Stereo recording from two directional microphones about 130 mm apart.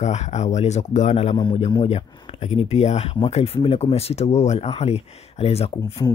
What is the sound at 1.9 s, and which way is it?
Speech, 55° left (ahead or behind).